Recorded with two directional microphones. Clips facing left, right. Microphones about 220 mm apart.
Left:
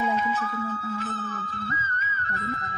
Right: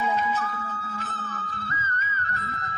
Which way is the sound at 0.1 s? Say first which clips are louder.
Even; 40° right (ahead or behind).